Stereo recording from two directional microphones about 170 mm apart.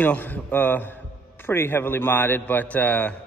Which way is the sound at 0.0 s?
10° left (ahead or behind).